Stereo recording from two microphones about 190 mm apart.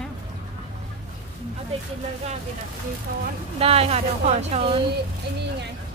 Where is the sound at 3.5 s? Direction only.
30° right (ahead or behind).